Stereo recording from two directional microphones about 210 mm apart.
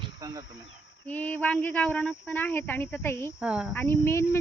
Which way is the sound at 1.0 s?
5° left (ahead or behind).